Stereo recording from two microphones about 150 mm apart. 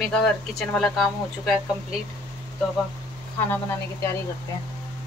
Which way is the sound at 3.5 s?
20° left (ahead or behind).